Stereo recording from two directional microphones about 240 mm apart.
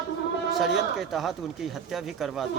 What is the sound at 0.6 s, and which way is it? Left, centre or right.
Speech, centre.